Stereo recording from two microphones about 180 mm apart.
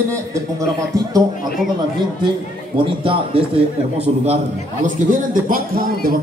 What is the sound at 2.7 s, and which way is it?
A man's voice, 30° right (ahead or behind).